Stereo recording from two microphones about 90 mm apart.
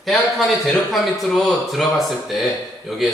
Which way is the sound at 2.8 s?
Centre (ahead or behind).